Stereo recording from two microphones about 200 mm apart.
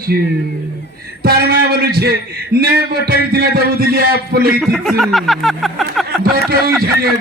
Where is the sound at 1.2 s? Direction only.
50° right (ahead or behind).